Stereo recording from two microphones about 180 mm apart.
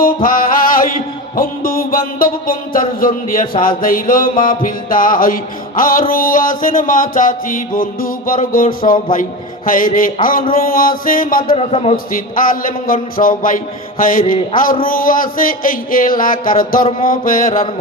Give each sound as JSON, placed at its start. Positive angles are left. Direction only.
{"t": 0.0, "sound": "music", "side_deg": 50}
{"t": 11.5, "sound": "a man's voice", "side_deg": 35}
{"t": 12.1, "sound": "music", "side_deg": 50}